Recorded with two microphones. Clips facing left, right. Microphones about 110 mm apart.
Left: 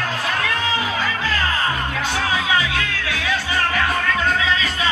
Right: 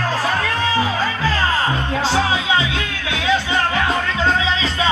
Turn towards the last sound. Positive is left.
turn(degrees=-25)  # may be behind; listen again after turning